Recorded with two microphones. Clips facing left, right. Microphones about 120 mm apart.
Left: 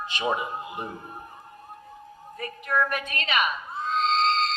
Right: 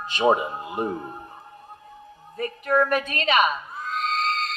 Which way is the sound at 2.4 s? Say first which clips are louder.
Right 5 dB; 35° right (ahead or behind).